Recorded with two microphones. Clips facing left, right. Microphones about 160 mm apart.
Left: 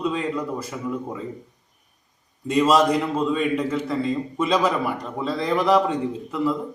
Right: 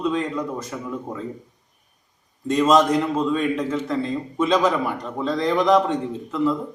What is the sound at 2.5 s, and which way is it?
A man's voice, 10° left (ahead or behind).